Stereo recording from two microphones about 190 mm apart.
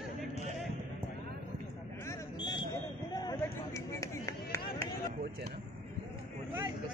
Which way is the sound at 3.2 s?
20° left (ahead or behind).